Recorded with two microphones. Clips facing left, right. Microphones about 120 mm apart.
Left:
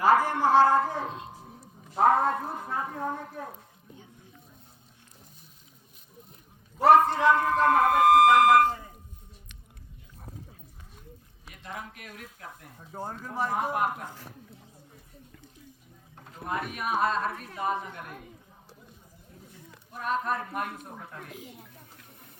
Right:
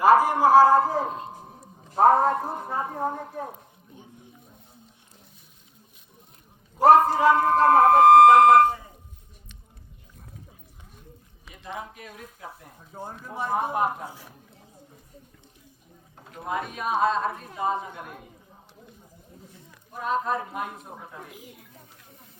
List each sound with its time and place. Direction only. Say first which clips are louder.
0.1 s speech: right 4 dB; 10° right (ahead or behind)
0.7 s a man's voice: right 5 dB; 35° right (ahead or behind)
6.8 s a man's voice: right 3 dB; 30° right (ahead or behind)
11.5 s a woman's voice: right 4 dB; 25° right (ahead or behind)
12.9 s speech: left 1 dB; 5° left (ahead or behind)
13.5 s a woman's voice: right 4 dB; 25° right (ahead or behind)
14.0 s speech: right 3 dB; 10° right (ahead or behind)
16.1 s a woman's voice: right 3 dB; 20° right (ahead or behind)
20.3 s speech: right 2 dB; 15° right (ahead or behind)